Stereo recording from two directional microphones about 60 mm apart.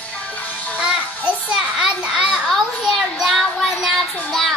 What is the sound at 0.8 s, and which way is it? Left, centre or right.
Child singing, centre.